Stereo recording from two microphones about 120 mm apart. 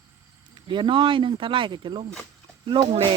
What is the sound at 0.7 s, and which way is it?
Speech, 40° right (ahead or behind).